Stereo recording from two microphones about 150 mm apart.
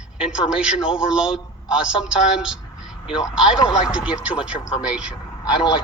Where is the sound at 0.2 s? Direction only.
5° right (ahead or behind).